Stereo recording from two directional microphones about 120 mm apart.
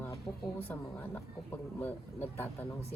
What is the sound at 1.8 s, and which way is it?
Speech, 15° left (ahead or behind).